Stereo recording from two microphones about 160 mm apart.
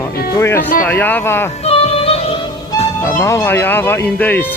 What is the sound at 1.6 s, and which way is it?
Music, 40° left (ahead or behind).